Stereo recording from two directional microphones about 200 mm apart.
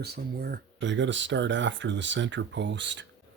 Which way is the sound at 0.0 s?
50° right (ahead or behind).